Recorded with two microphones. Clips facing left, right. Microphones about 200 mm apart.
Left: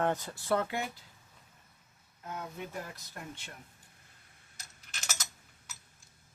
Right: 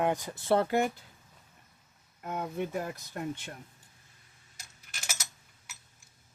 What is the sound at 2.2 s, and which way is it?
Speech, 60° right (ahead or behind).